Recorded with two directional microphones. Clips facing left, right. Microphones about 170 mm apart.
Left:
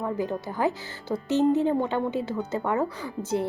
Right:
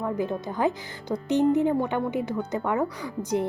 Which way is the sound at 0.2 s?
20° right (ahead or behind).